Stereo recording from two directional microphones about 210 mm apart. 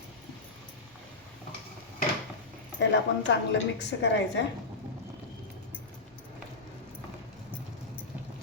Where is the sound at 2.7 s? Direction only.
60° left (ahead or behind).